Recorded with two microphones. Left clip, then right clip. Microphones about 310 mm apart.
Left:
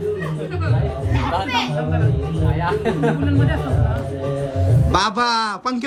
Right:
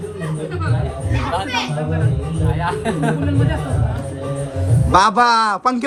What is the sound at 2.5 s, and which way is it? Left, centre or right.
Speech, right.